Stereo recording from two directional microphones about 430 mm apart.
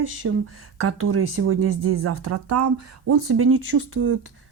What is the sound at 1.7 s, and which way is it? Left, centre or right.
Speech, right.